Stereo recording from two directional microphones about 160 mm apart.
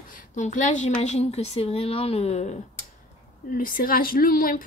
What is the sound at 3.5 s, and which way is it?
Speech, 65° left (ahead or behind).